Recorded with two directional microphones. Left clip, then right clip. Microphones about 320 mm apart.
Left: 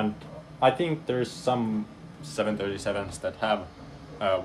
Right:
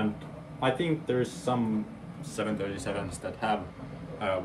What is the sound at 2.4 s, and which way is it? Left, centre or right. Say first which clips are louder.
Speech: left 4 dB; left.